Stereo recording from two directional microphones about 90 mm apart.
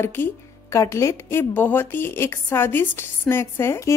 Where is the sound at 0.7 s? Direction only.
35° left (ahead or behind).